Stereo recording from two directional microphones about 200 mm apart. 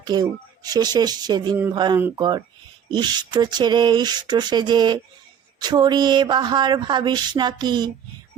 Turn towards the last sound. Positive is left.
turn(degrees=-20)  # may be behind; listen again after turning